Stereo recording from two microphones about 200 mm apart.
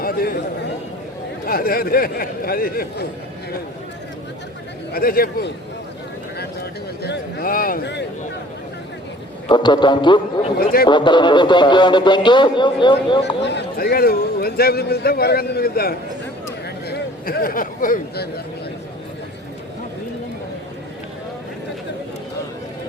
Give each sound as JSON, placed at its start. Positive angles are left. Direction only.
{"t": 0.0, "sound": "a sound", "side_deg": 50}
{"t": 1.5, "sound": "a man's voice", "side_deg": 45}
{"t": 4.9, "sound": "a man's voice", "side_deg": 50}
{"t": 7.0, "sound": "a man's voice", "side_deg": 55}
{"t": 9.5, "sound": "speech", "side_deg": 20}
{"t": 10.6, "sound": "a man's voice", "side_deg": 45}
{"t": 10.8, "sound": "speech", "side_deg": 25}
{"t": 13.4, "sound": "a man's voice", "side_deg": 60}